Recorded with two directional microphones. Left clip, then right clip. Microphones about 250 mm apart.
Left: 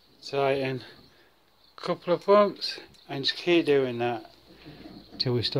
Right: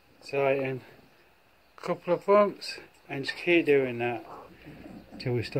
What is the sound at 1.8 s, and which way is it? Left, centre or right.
Speech, centre.